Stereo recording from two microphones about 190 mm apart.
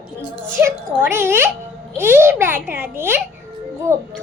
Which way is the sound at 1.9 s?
10° right (ahead or behind).